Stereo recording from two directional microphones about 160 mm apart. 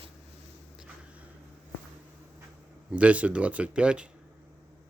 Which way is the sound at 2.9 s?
10° right (ahead or behind).